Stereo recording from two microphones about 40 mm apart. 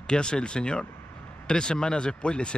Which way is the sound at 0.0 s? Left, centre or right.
Left.